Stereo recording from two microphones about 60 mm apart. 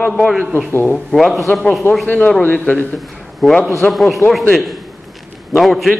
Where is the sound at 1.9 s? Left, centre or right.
Left.